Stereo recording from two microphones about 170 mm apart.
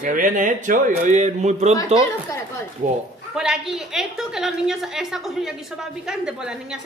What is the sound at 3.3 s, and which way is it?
A woman's voice, 5° right (ahead or behind).